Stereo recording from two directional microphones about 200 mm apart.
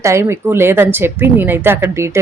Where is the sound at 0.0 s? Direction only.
15° right (ahead or behind).